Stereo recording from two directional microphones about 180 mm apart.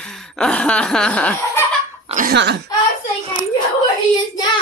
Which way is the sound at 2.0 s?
45° right (ahead or behind).